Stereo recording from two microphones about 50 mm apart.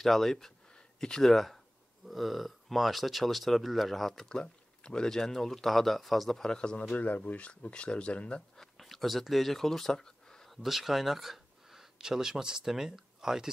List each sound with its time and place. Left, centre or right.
0.0 s speech: centre
6.8 s speech: left
8.5 s a sound: centre
10.5 s speech: centre